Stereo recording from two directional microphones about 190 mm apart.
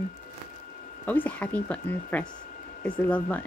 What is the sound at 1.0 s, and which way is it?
A woman's voice, 10° left (ahead or behind).